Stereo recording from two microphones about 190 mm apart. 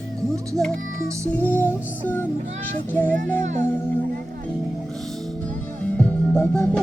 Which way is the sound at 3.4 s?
40° right (ahead or behind).